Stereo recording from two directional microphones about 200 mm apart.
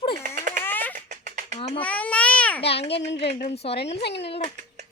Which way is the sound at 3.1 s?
30° left (ahead or behind).